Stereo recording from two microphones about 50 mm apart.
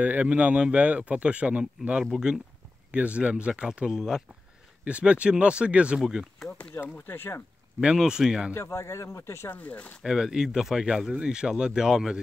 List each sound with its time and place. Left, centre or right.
0.0 s speech: right
2.1 s speech: centre
2.9 s speech: right; by 4.2 s centre
4.8 s speech: right
5.9 s speech: centre
6.8 s speech: left
7.8 s speech: centre
8.5 s speech: left
9.2 s speech: left
9.5 s speech: left
10.0 s speech: centre